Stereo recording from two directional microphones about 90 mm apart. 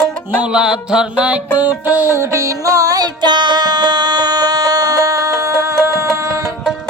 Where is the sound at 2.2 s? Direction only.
35° right (ahead or behind).